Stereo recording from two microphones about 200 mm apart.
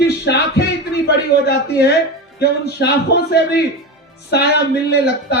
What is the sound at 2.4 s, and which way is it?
Speech, 55° left (ahead or behind).